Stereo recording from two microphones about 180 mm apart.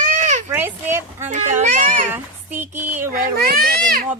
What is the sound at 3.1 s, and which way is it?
Speech, 50° right (ahead or behind).